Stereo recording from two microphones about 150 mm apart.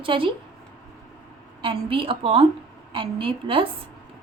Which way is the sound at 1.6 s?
35° right (ahead or behind).